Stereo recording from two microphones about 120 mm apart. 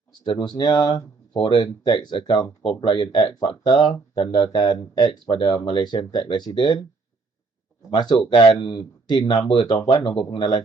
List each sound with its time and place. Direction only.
0.3 s speech: 40° left (ahead or behind)
7.9 s speech: 35° left (ahead or behind)